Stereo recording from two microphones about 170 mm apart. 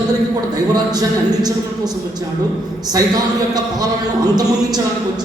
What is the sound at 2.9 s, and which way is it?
A man's voice, 20° right (ahead or behind).